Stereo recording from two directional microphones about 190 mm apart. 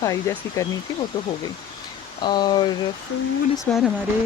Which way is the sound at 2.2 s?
25° left (ahead or behind).